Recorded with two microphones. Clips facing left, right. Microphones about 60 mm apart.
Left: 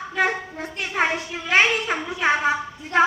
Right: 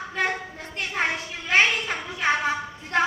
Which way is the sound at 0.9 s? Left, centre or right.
Left.